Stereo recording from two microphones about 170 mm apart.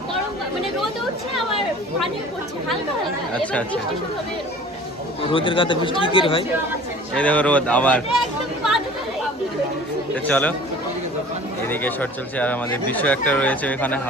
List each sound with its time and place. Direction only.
3.4 s speech: 10° left (ahead or behind)
5.3 s speech: 30° left (ahead or behind)
7.1 s speech: 10° left (ahead or behind)
10.2 s speech: 10° left (ahead or behind)
11.7 s speech: 10° left (ahead or behind)